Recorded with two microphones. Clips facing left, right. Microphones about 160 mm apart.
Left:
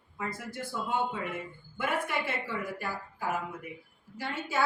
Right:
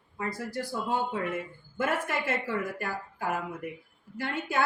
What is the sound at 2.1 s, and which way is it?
A woman's voice, 45° right (ahead or behind).